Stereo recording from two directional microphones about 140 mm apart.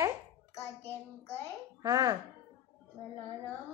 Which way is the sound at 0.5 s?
20° left (ahead or behind).